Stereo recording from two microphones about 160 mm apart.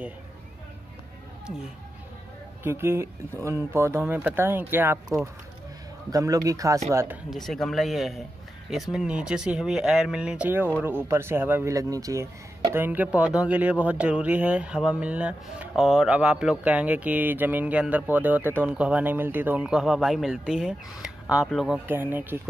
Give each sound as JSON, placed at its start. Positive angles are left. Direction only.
{"t": 2.6, "sound": "speech", "side_deg": -15}
{"t": 6.1, "sound": "speech", "side_deg": -20}
{"t": 7.2, "sound": "speech", "side_deg": 0}
{"t": 21.8, "sound": "speech", "side_deg": -10}